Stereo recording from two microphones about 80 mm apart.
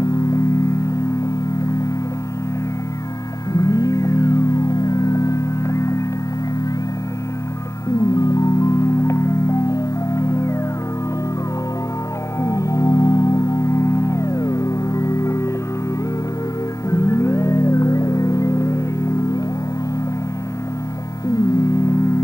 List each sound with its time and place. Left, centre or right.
0.0 s music: left
3.5 s music: left
8.1 s marimba: left
12.4 s music: left
16.9 s music: left
21.5 s music: left